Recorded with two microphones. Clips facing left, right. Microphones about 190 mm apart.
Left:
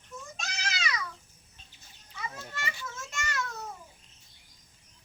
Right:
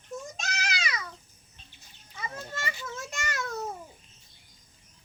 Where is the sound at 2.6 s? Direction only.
35° right (ahead or behind).